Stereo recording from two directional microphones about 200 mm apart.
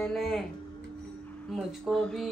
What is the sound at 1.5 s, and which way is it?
Speech, centre (ahead or behind).